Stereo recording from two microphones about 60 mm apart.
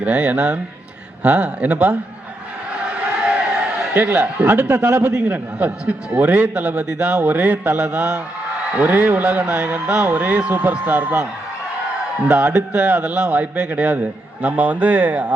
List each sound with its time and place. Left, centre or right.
0.0 s a man's voice: right
3.2 s a sound: right
4.7 s a man's voice: right
5.3 s a man's voice: right
8.7 s a man's voice: right
12.3 s a man's voice: right